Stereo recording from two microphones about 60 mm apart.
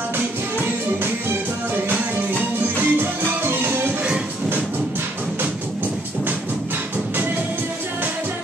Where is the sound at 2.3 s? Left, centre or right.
Right.